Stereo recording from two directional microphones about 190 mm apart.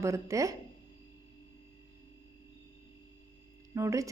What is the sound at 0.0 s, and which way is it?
Speech, 15° right (ahead or behind).